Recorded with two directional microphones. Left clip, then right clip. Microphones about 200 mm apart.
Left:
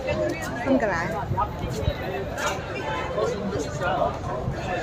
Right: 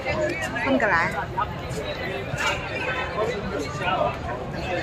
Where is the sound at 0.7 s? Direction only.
5° left (ahead or behind).